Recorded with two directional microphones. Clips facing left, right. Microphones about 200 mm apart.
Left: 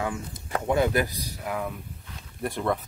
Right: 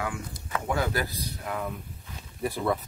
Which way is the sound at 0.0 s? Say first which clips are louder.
Left 3 dB; 25° left (ahead or behind).